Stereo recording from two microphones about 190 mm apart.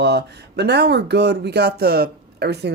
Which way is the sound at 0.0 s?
60° right (ahead or behind).